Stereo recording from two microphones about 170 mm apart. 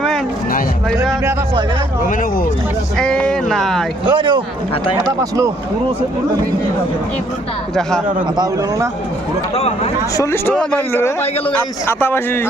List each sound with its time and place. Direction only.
3.0 s speech: 5° left (ahead or behind)
4.0 s speech: 25° right (ahead or behind)
7.8 s a man's voice: 5° left (ahead or behind)
9.6 s speech: 35° left (ahead or behind)
10.2 s a man's voice: 15° left (ahead or behind)